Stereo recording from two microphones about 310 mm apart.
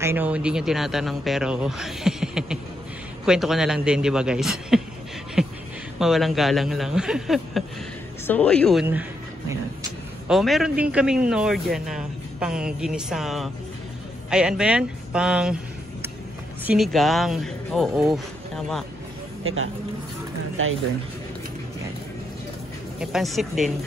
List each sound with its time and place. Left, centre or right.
0.0 s a man's voice: centre
5.4 s beatboxing: centre
5.9 s a man's voice: centre
10.2 s a man's voice: centre
16.6 s a man's voice: centre
19.4 s speech: right
22.9 s a man's voice: centre